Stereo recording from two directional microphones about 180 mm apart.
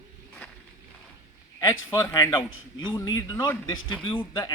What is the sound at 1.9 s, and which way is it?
Speech, 15° left (ahead or behind).